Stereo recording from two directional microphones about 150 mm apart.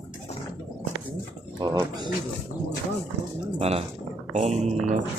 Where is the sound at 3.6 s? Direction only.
40° right (ahead or behind).